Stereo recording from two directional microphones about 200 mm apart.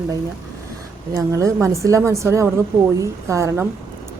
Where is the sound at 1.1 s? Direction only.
15° right (ahead or behind).